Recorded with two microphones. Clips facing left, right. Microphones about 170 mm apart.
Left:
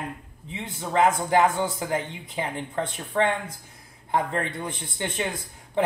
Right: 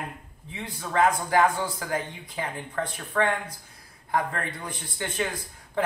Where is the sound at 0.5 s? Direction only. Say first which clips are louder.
Left 3 dB; 25° left (ahead or behind).